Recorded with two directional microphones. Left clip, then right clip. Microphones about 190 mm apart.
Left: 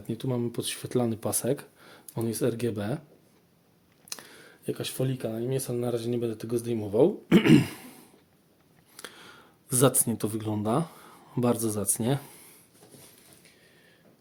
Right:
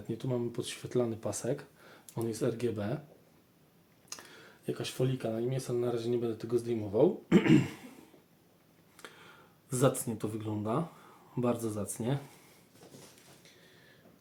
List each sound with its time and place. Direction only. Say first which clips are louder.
0.1 s speech: left 4 dB; 60° left (ahead or behind)
4.1 s speech: left 5 dB; 60° left (ahead or behind)
9.0 s speech: left 6 dB; 60° left (ahead or behind)